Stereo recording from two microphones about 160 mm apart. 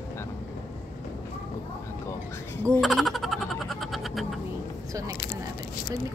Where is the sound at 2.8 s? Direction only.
Centre (ahead or behind).